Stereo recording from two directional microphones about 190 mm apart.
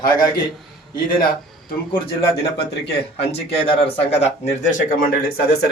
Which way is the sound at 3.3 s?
30° left (ahead or behind).